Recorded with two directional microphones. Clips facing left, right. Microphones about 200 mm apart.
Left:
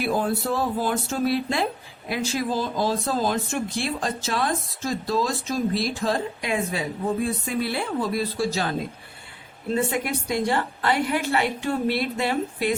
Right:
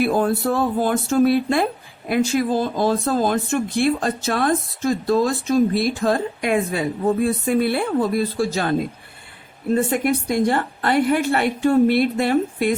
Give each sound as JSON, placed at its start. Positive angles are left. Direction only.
{"t": 0.0, "sound": "a woman's voice", "side_deg": -55}
{"t": 9.7, "sound": "a woman's voice", "side_deg": -50}